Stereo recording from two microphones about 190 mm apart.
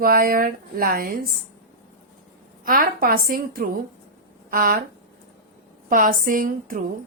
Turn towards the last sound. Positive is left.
turn(degrees=-45)  # may be behind; listen again after turning